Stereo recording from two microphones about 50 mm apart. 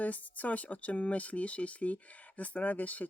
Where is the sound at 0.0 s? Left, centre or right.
Left.